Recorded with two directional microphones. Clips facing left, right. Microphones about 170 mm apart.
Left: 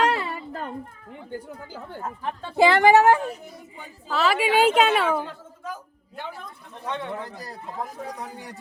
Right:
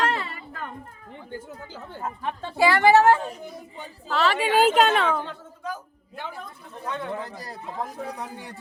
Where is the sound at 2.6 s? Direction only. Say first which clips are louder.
Left 1 dB; 20° left (ahead or behind).